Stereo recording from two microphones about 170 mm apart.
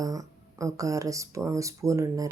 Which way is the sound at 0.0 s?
20° right (ahead or behind).